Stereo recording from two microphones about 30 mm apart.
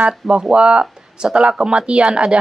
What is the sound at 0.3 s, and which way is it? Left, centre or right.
A woman's voice, right.